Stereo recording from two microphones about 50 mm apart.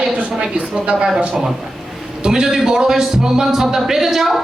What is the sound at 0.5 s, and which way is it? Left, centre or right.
Speech, right.